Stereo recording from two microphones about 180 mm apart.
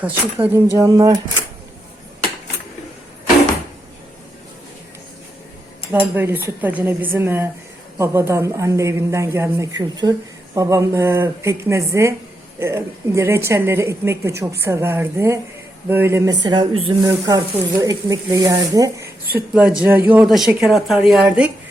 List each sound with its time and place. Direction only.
0.0 s speech: 10° right (ahead or behind)
6.1 s speech: 10° right (ahead or behind)